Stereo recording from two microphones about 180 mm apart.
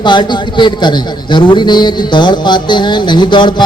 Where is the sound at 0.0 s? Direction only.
25° left (ahead or behind).